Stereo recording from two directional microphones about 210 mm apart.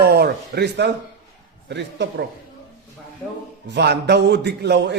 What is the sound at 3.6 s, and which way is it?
A man's voice, 55° right (ahead or behind).